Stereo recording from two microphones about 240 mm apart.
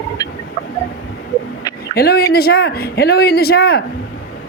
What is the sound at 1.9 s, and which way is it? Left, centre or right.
Speech, left.